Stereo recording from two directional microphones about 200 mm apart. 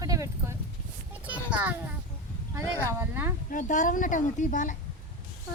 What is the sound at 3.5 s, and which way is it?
A woman's voice, 40° left (ahead or behind).